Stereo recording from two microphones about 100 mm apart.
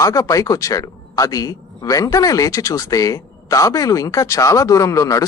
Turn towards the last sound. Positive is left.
turn(degrees=35)  # may be behind; listen again after turning